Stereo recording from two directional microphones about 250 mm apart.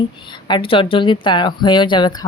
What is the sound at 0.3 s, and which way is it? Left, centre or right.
A woman's voice, centre.